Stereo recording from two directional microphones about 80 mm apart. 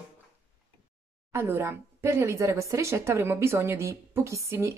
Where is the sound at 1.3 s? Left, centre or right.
Right.